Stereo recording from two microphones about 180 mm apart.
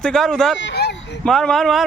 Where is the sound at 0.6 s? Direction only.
75° left (ahead or behind).